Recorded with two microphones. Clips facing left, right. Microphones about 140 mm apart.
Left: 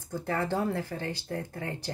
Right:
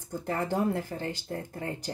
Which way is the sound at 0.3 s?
20° right (ahead or behind).